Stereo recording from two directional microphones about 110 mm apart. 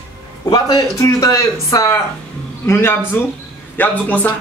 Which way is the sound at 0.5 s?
40° left (ahead or behind).